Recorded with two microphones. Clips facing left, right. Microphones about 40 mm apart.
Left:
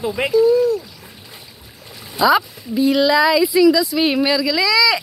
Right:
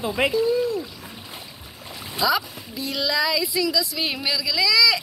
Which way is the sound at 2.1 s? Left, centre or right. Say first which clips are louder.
Left 7 dB; left.